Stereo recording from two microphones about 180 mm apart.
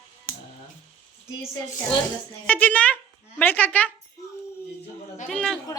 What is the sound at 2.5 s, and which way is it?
Speech, 10° left (ahead or behind).